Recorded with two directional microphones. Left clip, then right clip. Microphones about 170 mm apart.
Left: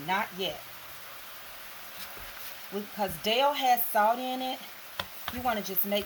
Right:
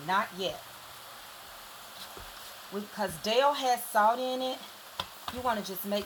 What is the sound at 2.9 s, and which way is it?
Speech, 15° left (ahead or behind).